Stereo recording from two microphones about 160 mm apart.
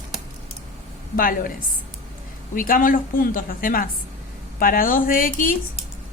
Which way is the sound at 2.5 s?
60° left (ahead or behind).